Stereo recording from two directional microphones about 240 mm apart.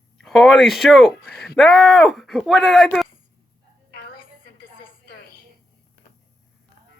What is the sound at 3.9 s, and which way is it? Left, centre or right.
Music, left.